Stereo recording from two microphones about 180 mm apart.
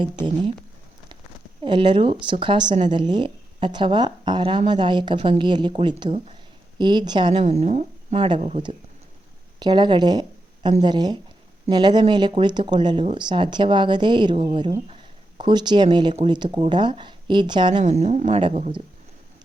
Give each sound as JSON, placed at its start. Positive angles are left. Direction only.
{"t": 0.0, "sound": "speech", "side_deg": -25}
{"t": 1.6, "sound": "speech", "side_deg": -25}
{"t": 7.4, "sound": "a woman's voice", "side_deg": -40}
{"t": 17.8, "sound": "speech", "side_deg": -40}